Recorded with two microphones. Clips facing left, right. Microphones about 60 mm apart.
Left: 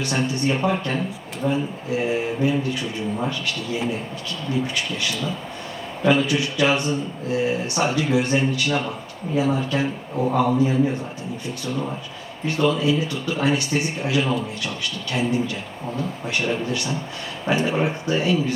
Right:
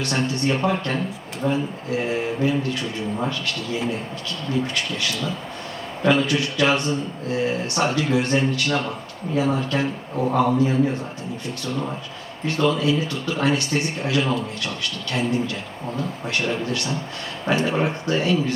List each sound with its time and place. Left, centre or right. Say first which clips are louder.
0.0 s a man's voice: even; centre